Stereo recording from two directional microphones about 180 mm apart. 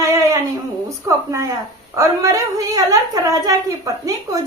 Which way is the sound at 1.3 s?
20° right (ahead or behind).